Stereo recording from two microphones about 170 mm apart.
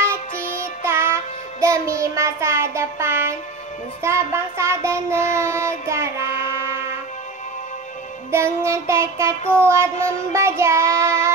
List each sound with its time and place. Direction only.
0.0 s music: 15° right (ahead or behind)
4.0 s child singing: 15° right (ahead or behind)
8.3 s child singing: 15° right (ahead or behind)